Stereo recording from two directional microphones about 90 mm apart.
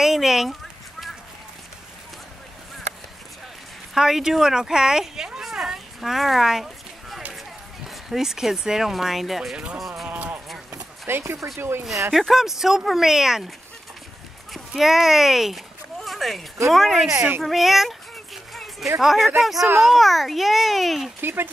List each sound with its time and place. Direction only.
0.0 s a sound: 5° right (ahead or behind)
3.9 s speech: 5° right (ahead or behind)
10.0 s speech: 15° right (ahead or behind)
12.1 s speech: centre (ahead or behind)
14.5 s a sound: 5° right (ahead or behind)
16.6 s speech: centre (ahead or behind)
17.4 s a sound: centre (ahead or behind)
18.9 s speech: 5° right (ahead or behind)
21.2 s speech: 25° right (ahead or behind)